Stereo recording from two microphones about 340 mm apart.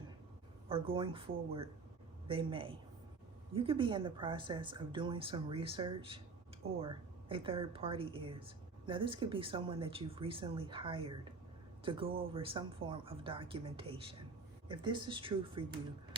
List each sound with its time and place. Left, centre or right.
0.7 s speech: centre